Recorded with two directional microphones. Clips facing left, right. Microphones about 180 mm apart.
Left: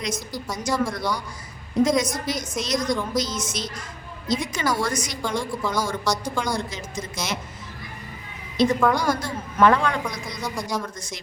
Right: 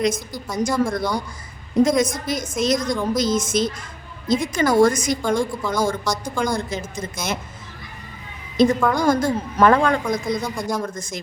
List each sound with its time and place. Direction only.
0.5 s a woman's voice: 50° right (ahead or behind)
8.6 s a woman's voice: 50° right (ahead or behind)